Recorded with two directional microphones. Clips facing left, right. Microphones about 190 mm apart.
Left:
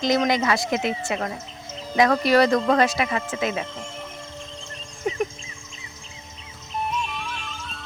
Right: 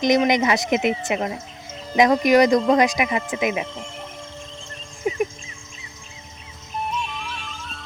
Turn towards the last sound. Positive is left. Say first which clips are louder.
# even
turn(degrees=0)  # may be behind; listen again after turning